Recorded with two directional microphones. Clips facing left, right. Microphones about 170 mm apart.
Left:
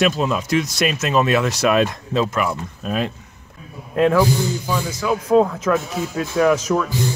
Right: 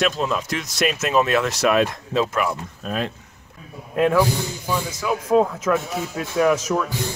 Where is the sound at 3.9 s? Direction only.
5° right (ahead or behind).